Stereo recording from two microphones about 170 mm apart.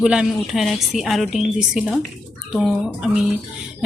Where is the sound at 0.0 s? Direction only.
5° right (ahead or behind).